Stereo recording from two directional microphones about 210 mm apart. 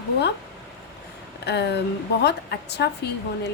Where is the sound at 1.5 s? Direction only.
50° left (ahead or behind).